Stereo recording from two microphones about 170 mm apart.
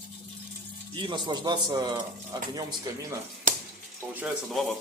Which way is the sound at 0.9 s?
25° right (ahead or behind).